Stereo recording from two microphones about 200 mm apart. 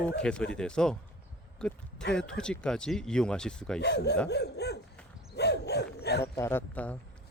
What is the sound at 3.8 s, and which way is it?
Hoot, 55° left (ahead or behind).